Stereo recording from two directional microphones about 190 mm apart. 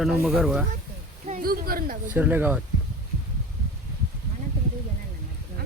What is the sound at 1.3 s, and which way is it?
Speech, 45° right (ahead or behind).